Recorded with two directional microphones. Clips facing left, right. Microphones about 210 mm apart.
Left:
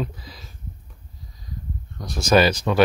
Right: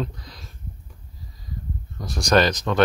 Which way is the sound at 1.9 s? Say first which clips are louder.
Left 1 dB; centre (ahead or behind).